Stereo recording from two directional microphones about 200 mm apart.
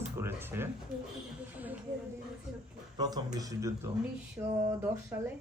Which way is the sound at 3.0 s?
20° right (ahead or behind).